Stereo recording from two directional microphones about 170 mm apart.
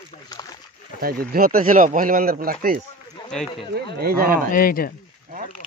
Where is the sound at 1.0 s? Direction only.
60° right (ahead or behind).